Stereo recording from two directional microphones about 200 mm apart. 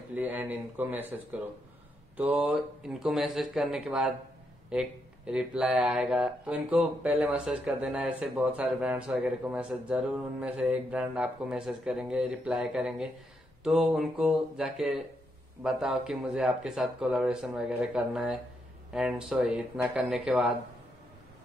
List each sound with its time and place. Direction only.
0.1 s speech: 10° right (ahead or behind)